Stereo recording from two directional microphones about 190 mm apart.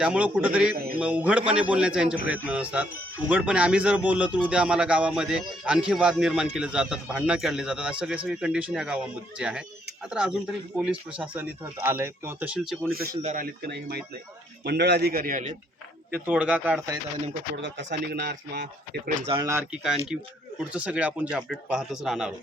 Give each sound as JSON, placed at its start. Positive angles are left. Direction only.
{"t": 0.0, "sound": "speech", "side_deg": -5}
{"t": 12.9, "sound": "speech", "side_deg": -55}
{"t": 16.1, "sound": "speech", "side_deg": -10}
{"t": 17.6, "sound": "speech", "side_deg": -70}
{"t": 19.3, "sound": "speech", "side_deg": -15}